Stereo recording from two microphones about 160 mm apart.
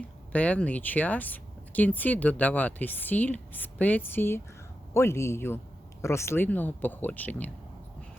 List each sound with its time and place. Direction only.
0.3 s speech: 10° left (ahead or behind)